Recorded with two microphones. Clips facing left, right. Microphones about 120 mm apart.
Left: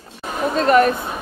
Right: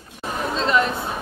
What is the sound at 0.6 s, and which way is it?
Speech, 55° left (ahead or behind).